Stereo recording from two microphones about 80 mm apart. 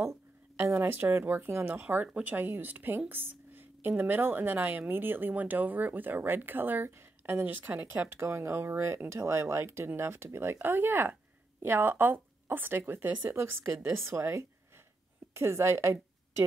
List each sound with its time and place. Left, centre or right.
0.0 s a woman's voice: right